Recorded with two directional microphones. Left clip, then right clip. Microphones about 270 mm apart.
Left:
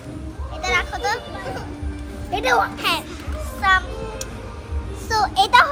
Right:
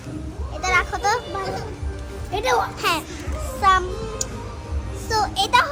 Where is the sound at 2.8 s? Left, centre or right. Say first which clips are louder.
Even; centre.